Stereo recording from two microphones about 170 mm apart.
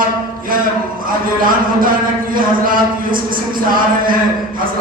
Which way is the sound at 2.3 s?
55° right (ahead or behind).